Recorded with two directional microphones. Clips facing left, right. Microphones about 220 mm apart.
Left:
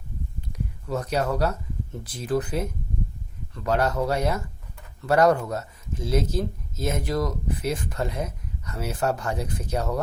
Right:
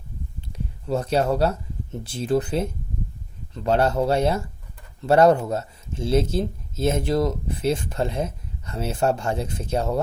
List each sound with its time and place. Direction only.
0.4 s speech: 30° right (ahead or behind)